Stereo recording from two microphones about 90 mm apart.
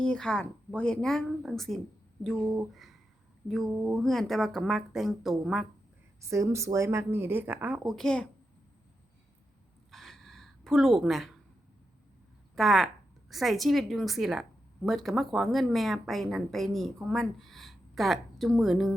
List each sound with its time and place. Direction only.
0.0 s a woman's voice: 10° left (ahead or behind)
3.8 s a woman's voice: 5° left (ahead or behind)
6.2 s a woman's voice: 35° right (ahead or behind)
7.9 s speech: 5° left (ahead or behind)
9.9 s a sound: centre (ahead or behind)
12.5 s a woman's voice: centre (ahead or behind)